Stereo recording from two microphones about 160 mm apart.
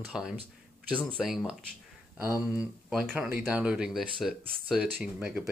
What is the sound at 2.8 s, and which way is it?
Speech, centre (ahead or behind).